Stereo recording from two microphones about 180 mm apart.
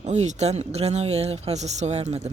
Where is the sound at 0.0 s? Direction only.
40° right (ahead or behind).